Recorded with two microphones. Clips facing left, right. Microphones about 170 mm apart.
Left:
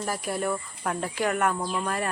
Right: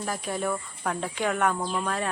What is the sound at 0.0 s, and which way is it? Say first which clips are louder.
Speech: left 1 dB; 5° left (ahead or behind).